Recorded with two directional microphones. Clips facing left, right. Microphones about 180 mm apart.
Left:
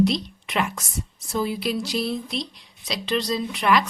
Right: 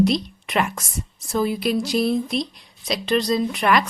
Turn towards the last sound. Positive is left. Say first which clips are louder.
# right 2 dB
turn(degrees=-50)  # may be behind; listen again after turning